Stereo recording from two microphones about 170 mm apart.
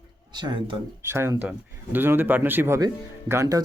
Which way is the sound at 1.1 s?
15° right (ahead or behind).